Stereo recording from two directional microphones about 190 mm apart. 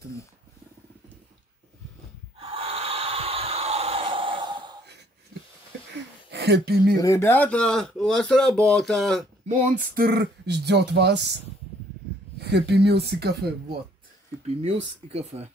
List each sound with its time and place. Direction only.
2.3 s snort: 30° right (ahead or behind)
6.3 s speech: 65° right (ahead or behind)
7.0 s speech: 15° left (ahead or behind)
9.5 s speech: 40° right (ahead or behind); by 11.3 s 65° right (ahead or behind)
12.4 s speech: 60° right (ahead or behind)
14.6 s speech: 30° right (ahead or behind)